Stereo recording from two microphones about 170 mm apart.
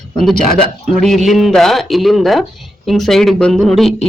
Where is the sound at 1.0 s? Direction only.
Centre (ahead or behind).